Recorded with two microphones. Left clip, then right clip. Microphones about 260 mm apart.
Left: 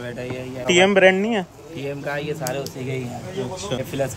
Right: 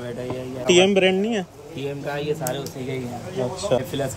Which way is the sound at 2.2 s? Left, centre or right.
Centre.